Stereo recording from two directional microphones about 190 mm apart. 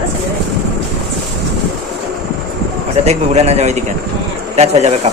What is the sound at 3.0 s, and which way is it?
A man's voice, 35° right (ahead or behind).